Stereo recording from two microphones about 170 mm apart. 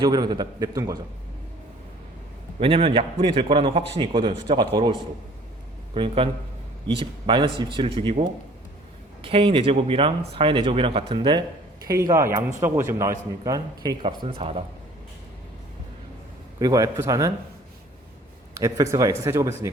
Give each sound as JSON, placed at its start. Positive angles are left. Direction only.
{"t": 0.0, "sound": "a man's voice", "side_deg": -25}
{"t": 2.6, "sound": "speech", "side_deg": -30}
{"t": 5.9, "sound": "a man's voice", "side_deg": -30}
{"t": 16.6, "sound": "a man's voice", "side_deg": -20}
{"t": 18.6, "sound": "a man's voice", "side_deg": -20}